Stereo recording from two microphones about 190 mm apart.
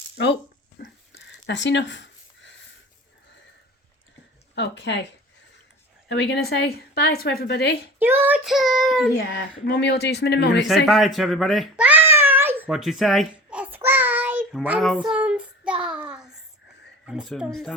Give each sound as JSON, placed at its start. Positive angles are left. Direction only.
{"t": 0.8, "sound": "a sound", "side_deg": 65}
{"t": 4.5, "sound": "speech", "side_deg": 65}
{"t": 6.1, "sound": "speech", "side_deg": 65}
{"t": 7.9, "sound": "child singing", "side_deg": -10}
{"t": 9.3, "sound": "speech", "side_deg": 60}
{"t": 10.8, "sound": "a sound", "side_deg": 0}
{"t": 14.6, "sound": "child singing", "side_deg": -10}
{"t": 17.1, "sound": "speech", "side_deg": -5}